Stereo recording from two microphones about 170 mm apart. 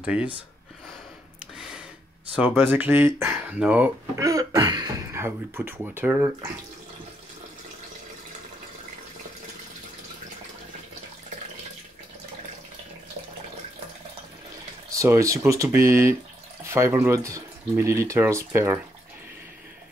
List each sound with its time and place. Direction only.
0.0 s speech: 5° right (ahead or behind)
2.3 s speech: 10° right (ahead or behind)
4.2 s speech: 20° right (ahead or behind)
14.9 s speech: 20° right (ahead or behind)